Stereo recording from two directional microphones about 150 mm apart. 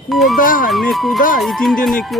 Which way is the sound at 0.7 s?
Centre (ahead or behind).